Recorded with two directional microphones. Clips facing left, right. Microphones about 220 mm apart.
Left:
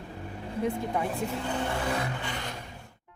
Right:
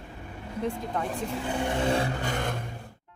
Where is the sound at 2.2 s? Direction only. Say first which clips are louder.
Right 6 dB; 45° right (ahead or behind).